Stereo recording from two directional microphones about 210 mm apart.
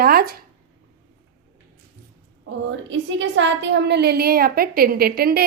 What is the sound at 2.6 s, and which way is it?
A woman's voice, 65° right (ahead or behind).